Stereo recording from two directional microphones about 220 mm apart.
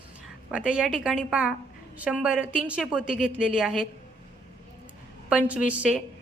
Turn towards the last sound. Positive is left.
turn(degrees=-5)  # may be behind; listen again after turning